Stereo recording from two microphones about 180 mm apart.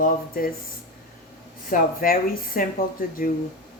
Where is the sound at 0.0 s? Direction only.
55° left (ahead or behind).